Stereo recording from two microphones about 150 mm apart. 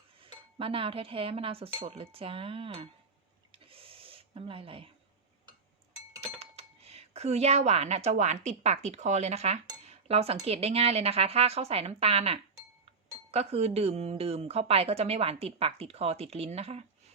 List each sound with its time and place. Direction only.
0.2 s chink: 35° right (ahead or behind)
1.9 s speech: 40° right (ahead or behind)
3.5 s a sound: 40° right (ahead or behind)
6.4 s a woman's voice: 45° right (ahead or behind)